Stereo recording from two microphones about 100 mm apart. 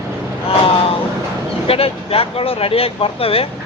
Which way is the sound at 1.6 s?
75° left (ahead or behind).